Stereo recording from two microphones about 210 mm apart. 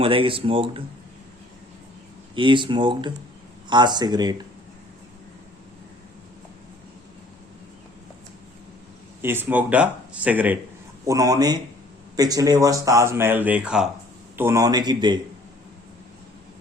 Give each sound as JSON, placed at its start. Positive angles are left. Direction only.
{"t": 0.0, "sound": "speech", "side_deg": -25}
{"t": 2.3, "sound": "speech", "side_deg": -25}
{"t": 9.2, "sound": "speech", "side_deg": -10}